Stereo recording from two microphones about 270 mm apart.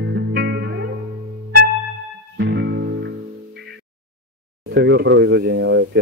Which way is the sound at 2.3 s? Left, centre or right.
Right.